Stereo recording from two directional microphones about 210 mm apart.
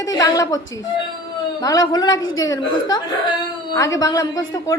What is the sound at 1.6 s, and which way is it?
A woman's voice, 15° left (ahead or behind).